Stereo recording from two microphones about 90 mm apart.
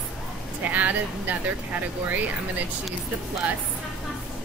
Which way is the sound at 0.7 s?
20° right (ahead or behind).